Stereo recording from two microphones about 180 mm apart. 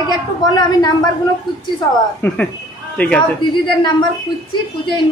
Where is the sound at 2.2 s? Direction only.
10° left (ahead or behind).